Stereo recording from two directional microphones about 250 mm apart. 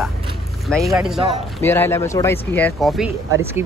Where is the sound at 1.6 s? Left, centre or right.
Centre.